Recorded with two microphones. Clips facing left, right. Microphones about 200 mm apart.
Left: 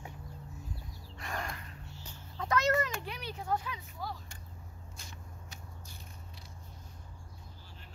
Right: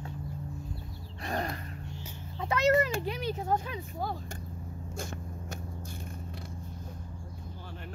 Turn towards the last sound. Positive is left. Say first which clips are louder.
# right 11 dB
turn(degrees=-60)  # may be behind; listen again after turning